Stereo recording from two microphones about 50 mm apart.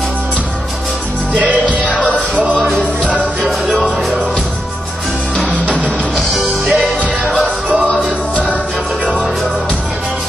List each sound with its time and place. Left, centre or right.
1.4 s music: right
3.7 s music: centre
5.7 s music: centre